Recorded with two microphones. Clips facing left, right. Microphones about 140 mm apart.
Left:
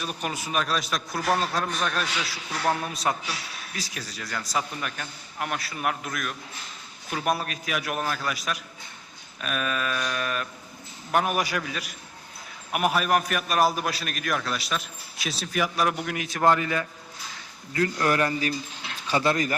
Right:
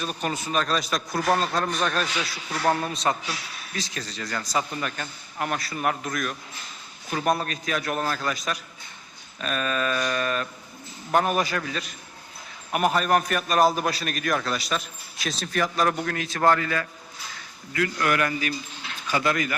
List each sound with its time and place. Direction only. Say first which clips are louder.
0.0 s a man's voice: right 3 dB; 5° left (ahead or behind)
17.7 s a man's voice: left 1 dB; 30° left (ahead or behind)